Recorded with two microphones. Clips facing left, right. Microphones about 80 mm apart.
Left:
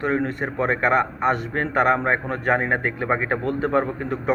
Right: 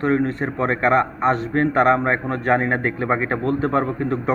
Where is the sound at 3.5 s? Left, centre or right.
Right.